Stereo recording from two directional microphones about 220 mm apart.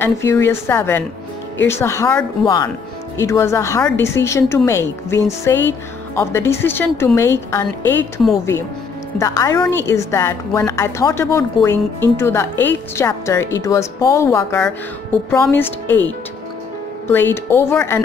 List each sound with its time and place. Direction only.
0.0 s a woman's voice: 10° left (ahead or behind)
9.2 s a woman's voice: 15° left (ahead or behind)
17.1 s a woman's voice: 10° left (ahead or behind)